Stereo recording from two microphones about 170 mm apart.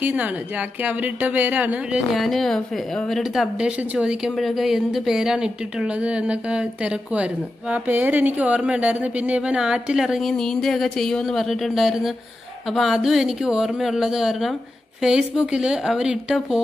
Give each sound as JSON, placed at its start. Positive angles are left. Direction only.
{"t": 0.0, "sound": "a woman's voice", "side_deg": -10}